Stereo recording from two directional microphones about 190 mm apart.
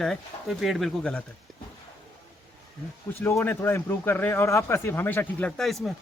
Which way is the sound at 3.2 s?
10° left (ahead or behind).